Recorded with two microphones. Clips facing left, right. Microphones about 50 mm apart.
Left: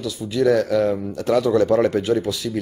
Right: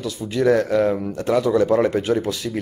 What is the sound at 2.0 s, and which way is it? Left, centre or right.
Speech, right.